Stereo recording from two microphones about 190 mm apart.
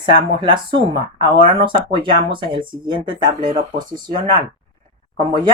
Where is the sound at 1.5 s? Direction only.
25° right (ahead or behind).